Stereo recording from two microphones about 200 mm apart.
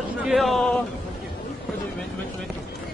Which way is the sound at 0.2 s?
Centre (ahead or behind).